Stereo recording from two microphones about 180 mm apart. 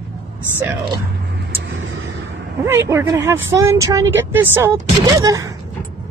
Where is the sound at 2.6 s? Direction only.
15° right (ahead or behind).